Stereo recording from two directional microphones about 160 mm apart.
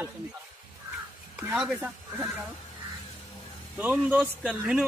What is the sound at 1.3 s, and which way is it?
Speech, 5° right (ahead or behind).